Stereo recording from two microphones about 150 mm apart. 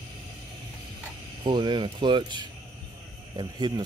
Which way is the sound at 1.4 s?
35° right (ahead or behind).